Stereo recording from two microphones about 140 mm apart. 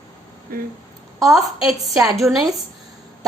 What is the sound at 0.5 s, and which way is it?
Speech, 90° right.